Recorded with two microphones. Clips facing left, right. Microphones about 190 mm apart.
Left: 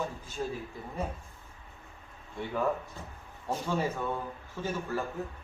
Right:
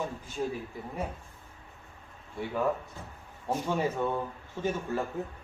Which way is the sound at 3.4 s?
20° right (ahead or behind).